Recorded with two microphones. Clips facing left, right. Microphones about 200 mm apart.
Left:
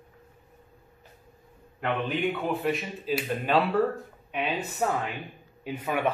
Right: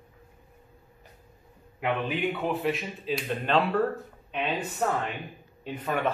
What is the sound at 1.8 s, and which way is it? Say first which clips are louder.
A man's voice: even; 5° right (ahead or behind).